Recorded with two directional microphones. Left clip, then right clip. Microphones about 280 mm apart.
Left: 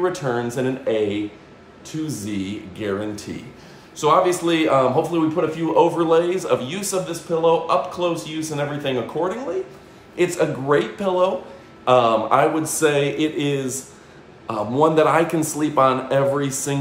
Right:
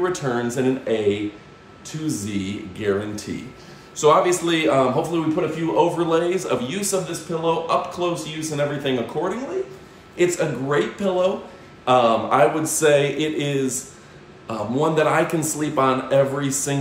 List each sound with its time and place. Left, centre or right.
0.0 s a man's voice: centre